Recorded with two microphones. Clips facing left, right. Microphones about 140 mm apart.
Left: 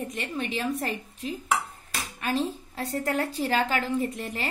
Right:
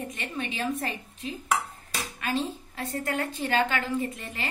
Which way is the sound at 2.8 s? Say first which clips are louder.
Left 3 dB; 35° left (ahead or behind).